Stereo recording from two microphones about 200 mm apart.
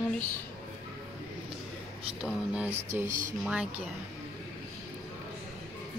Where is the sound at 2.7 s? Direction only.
30° right (ahead or behind).